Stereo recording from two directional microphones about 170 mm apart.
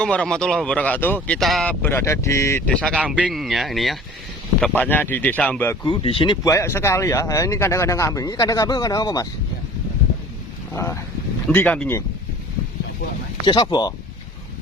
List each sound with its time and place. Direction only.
0.0 s speech: 5° left (ahead or behind)
1.8 s speech: 15° left (ahead or behind)
3.0 s speech: 5° right (ahead or behind); by 5.7 s 10° left (ahead or behind)
5.8 s speech: 30° left (ahead or behind)
10.8 s speech: 15° left (ahead or behind)
13.4 s speech: 25° left (ahead or behind)